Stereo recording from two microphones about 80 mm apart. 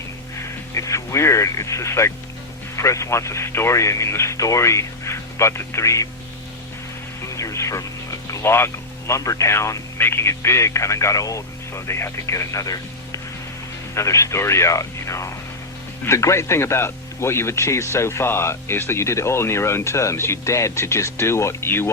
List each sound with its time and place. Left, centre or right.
0.7 s speech: left
7.3 s music: left
8.3 s a man's voice: left